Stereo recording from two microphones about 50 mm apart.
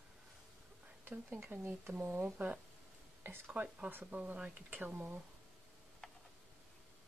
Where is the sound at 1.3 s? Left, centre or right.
Right.